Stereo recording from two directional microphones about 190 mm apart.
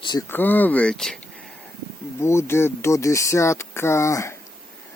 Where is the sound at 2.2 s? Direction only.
15° left (ahead or behind).